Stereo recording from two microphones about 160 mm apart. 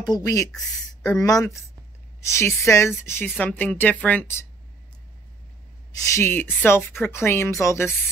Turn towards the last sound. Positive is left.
turn(degrees=15)  # may be behind; listen again after turning